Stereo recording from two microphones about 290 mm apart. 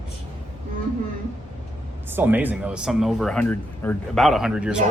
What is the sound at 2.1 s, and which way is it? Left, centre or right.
Speech, centre.